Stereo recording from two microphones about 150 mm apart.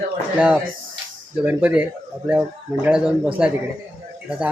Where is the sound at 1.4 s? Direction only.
10° right (ahead or behind).